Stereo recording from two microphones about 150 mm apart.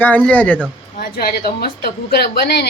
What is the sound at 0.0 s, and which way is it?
Speech, 10° left (ahead or behind).